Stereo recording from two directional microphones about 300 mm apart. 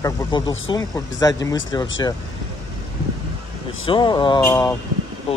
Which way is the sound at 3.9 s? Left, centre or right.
Centre.